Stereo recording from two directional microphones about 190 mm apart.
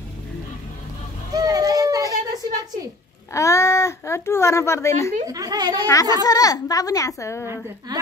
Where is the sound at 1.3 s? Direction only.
20° right (ahead or behind).